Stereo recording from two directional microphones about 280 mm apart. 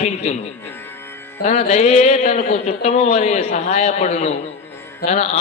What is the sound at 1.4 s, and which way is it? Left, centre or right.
A man's voice, left.